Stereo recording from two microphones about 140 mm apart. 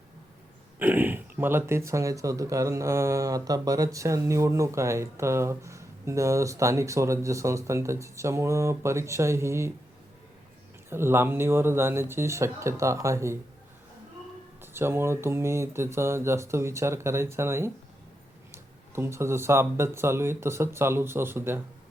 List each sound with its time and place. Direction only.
0.8 s speech: 15° right (ahead or behind)
10.8 s speech: 15° right (ahead or behind)
14.6 s speech: 15° right (ahead or behind)